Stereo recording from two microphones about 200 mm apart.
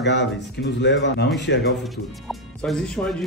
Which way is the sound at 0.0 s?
60° left (ahead or behind).